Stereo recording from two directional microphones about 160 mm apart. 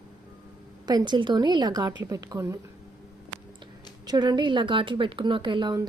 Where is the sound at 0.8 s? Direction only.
25° right (ahead or behind).